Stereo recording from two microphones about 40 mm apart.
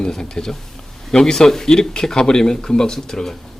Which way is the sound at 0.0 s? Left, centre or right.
Centre.